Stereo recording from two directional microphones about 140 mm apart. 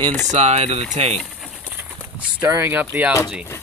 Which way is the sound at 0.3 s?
50° right (ahead or behind).